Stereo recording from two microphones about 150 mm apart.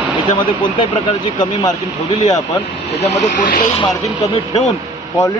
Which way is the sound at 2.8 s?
45° left (ahead or behind).